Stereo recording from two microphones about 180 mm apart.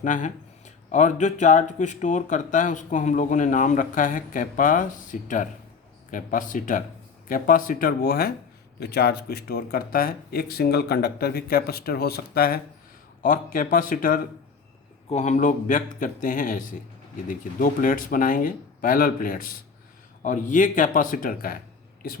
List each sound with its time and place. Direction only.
0.0 s speech: 45° left (ahead or behind)